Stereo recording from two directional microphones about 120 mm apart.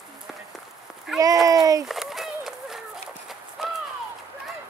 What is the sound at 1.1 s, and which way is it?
Speech, 5° right (ahead or behind).